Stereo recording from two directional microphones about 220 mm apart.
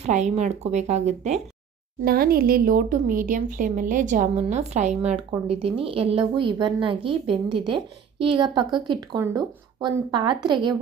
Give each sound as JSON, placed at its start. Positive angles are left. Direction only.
{"t": 0.0, "sound": "speech", "side_deg": -30}
{"t": 2.0, "sound": "a woman's voice", "side_deg": -40}